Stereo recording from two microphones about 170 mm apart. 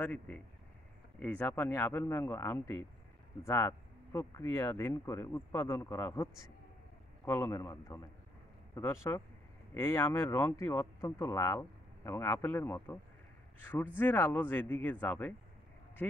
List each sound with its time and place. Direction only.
0.0 s speech: 10° left (ahead or behind)